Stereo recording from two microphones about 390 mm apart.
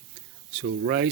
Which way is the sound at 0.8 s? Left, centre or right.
Right.